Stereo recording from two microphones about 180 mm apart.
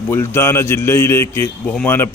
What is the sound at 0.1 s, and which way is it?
A man's voice, 15° left (ahead or behind).